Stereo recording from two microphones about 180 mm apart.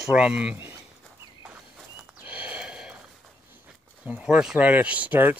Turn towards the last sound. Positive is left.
turn(degrees=-10)  # may be behind; listen again after turning